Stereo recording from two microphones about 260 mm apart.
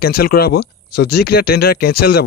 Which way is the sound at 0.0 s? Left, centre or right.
Left.